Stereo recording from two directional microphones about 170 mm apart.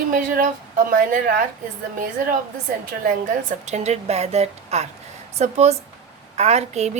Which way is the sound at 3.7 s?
40° right (ahead or behind).